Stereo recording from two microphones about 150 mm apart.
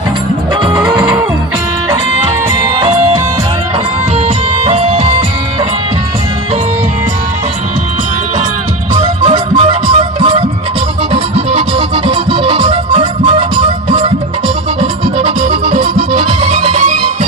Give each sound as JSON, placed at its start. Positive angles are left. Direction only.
{"t": 2.7, "sound": "music", "side_deg": -30}
{"t": 4.5, "sound": "music", "side_deg": -40}
{"t": 9.0, "sound": "music", "side_deg": -40}